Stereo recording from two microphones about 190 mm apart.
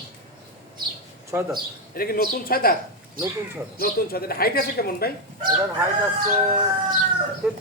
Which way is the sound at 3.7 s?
55° left (ahead or behind).